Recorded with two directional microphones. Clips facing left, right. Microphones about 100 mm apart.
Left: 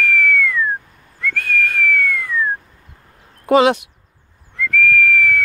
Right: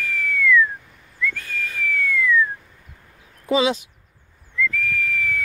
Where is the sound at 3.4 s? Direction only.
65° left (ahead or behind).